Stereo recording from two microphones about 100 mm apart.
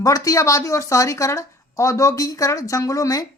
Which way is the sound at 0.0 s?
35° left (ahead or behind).